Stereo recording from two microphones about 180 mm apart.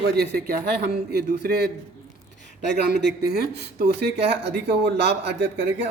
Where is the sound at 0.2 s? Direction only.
55° right (ahead or behind).